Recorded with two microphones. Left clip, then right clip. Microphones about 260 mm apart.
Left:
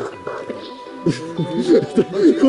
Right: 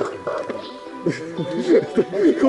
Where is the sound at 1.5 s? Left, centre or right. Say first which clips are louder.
Left 2 dB; centre.